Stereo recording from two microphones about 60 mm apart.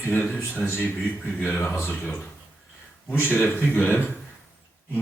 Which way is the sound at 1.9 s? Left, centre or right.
Left.